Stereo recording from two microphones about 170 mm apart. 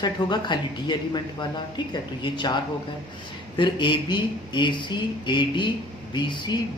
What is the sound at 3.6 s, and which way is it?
Speech, 30° left (ahead or behind).